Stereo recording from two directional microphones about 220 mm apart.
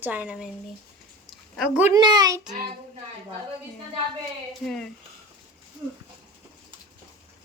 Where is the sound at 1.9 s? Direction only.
20° right (ahead or behind).